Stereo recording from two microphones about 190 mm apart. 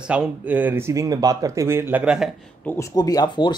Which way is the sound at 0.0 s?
5° right (ahead or behind).